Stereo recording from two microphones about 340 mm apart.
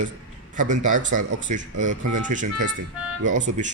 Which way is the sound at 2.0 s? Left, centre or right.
Right.